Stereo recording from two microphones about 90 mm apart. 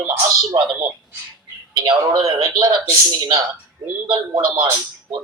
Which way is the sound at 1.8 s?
55° right (ahead or behind).